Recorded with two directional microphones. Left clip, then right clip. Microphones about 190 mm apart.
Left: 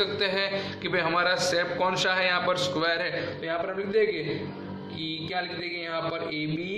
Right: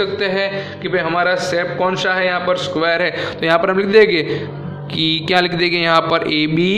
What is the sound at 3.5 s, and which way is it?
Speech, 45° right (ahead or behind).